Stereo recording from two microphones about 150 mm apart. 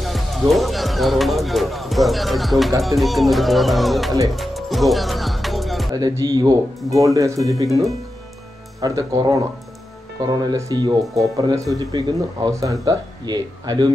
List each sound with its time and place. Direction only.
0.0 s speech: centre (ahead or behind)
4.3 s music: centre (ahead or behind)
5.9 s speech: 25° right (ahead or behind)
8.8 s speech: 25° right (ahead or behind)